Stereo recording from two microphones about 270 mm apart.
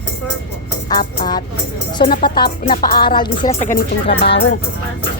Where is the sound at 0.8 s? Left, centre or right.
Centre.